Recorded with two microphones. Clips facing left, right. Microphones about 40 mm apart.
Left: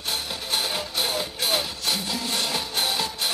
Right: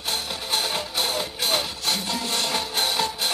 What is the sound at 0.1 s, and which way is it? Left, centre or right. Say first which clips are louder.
Music: right 1 dB; centre.